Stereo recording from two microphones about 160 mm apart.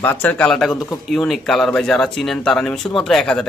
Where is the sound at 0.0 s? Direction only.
10° left (ahead or behind).